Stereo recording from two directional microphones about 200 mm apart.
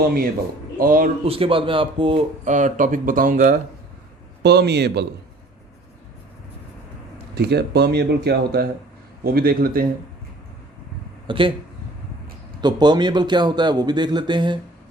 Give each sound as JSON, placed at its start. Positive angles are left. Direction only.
{"t": 0.8, "sound": "speech", "side_deg": -45}
{"t": 1.2, "sound": "speech", "side_deg": -30}
{"t": 4.4, "sound": "speech", "side_deg": -55}
{"t": 7.3, "sound": "speech", "side_deg": -55}
{"t": 11.3, "sound": "a man's voice", "side_deg": -25}
{"t": 12.6, "sound": "a man's voice", "side_deg": -20}